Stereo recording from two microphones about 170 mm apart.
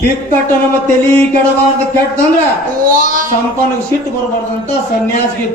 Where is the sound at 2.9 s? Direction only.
55° right (ahead or behind).